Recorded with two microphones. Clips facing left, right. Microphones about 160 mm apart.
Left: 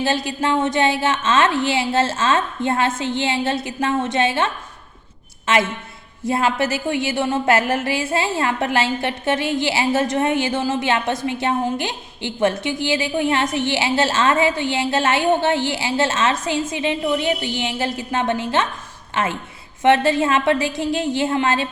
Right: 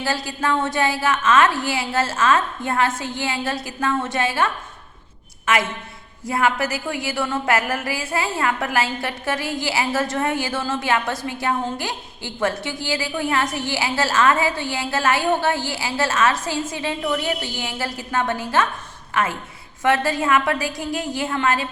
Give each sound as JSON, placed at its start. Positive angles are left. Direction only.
{"t": 0.0, "sound": "a woman's voice", "side_deg": 20}
{"t": 6.2, "sound": "a woman's voice", "side_deg": 25}